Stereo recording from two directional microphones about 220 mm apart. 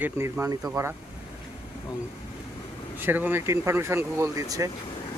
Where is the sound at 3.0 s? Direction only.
10° right (ahead or behind).